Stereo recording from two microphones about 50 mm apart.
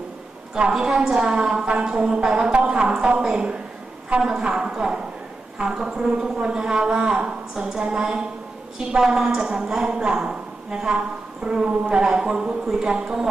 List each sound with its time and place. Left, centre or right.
0.5 s a woman's voice: centre